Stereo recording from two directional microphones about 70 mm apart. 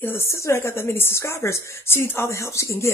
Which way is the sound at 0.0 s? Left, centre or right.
Left.